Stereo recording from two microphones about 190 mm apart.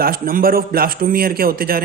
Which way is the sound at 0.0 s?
50° right (ahead or behind).